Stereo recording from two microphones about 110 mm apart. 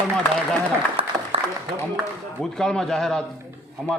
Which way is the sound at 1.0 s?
60° right (ahead or behind).